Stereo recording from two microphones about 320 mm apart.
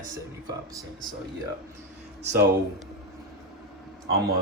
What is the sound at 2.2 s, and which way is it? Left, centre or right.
Speech, right.